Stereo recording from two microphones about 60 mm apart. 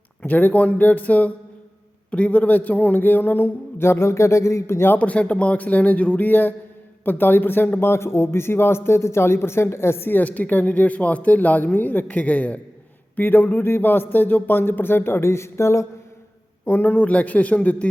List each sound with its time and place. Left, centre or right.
0.2 s speech: left
4.9 s a man's voice: left
10.2 s speech: left
16.6 s speech: left